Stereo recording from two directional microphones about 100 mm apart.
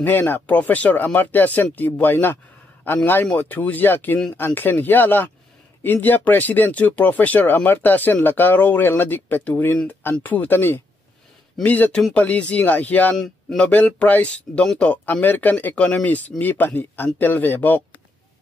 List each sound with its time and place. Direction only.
0.0 s a man's voice: 20° left (ahead or behind)
13.1 s a man's voice: 5° left (ahead or behind)
13.7 s speech: 15° left (ahead or behind)